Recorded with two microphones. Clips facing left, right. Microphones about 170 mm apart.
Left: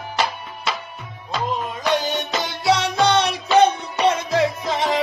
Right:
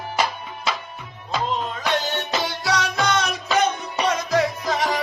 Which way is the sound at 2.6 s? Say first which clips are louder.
Left 7 dB; 25° left (ahead or behind).